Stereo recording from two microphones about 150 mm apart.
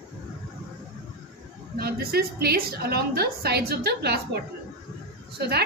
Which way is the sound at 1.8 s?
90° right.